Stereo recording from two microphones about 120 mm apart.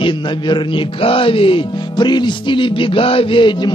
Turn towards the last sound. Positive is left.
turn(degrees=40)  # may be behind; listen again after turning